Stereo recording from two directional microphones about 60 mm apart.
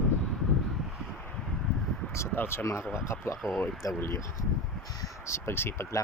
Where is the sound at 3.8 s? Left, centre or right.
Left.